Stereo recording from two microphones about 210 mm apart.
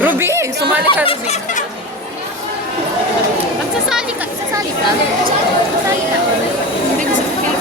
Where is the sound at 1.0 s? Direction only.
30° left (ahead or behind).